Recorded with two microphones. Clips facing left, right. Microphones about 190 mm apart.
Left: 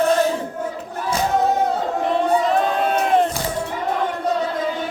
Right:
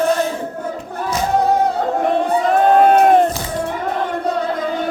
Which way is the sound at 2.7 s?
50° right (ahead or behind).